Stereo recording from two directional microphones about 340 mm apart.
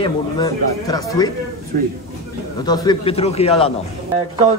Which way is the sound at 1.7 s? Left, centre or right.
Right.